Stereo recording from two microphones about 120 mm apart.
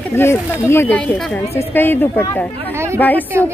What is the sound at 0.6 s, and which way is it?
Speech, 20° left (ahead or behind).